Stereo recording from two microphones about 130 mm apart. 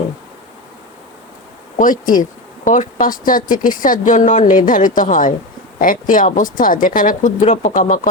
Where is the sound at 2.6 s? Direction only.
75° left (ahead or behind).